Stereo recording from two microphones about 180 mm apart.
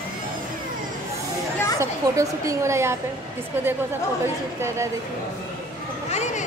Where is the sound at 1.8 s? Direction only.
15° right (ahead or behind).